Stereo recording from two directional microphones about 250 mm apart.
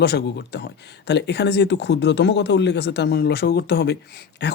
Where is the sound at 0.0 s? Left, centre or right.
Left.